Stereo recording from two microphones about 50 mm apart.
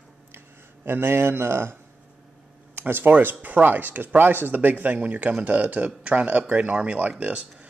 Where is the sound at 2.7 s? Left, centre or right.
Right.